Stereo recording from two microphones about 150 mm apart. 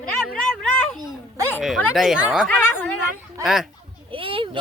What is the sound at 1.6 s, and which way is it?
Speech, centre (ahead or behind).